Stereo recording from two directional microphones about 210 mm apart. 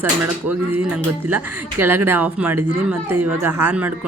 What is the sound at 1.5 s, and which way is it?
Speech, 90° right.